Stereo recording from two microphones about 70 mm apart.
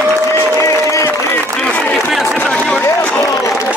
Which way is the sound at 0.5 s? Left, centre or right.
Left.